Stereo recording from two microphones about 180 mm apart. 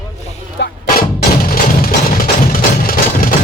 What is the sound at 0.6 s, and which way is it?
Music, 70° left (ahead or behind).